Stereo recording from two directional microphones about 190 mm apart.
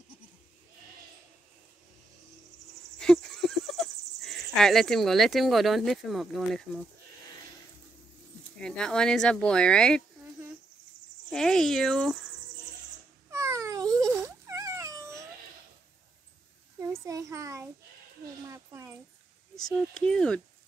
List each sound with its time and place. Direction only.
3.0 s speech: 5° left (ahead or behind)
8.5 s speech: 5° left (ahead or behind)
11.3 s speech: 5° left (ahead or behind)
13.3 s a sound: 15° right (ahead or behind)
16.8 s a child's voice: 15° right (ahead or behind)
18.5 s a sound: 15° right (ahead or behind)
19.5 s speech: 5° left (ahead or behind)